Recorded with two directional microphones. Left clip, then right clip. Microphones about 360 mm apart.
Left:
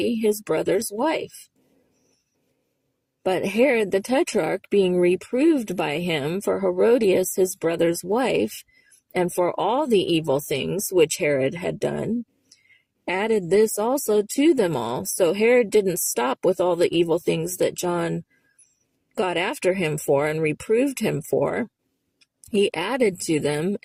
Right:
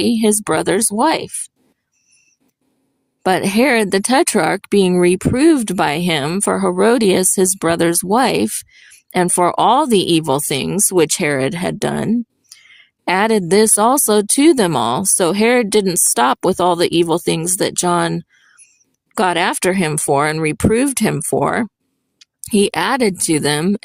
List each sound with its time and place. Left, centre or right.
0.0 s speech: right
3.2 s speech: right